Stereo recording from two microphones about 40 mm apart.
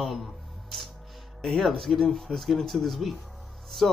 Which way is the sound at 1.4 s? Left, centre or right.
Centre.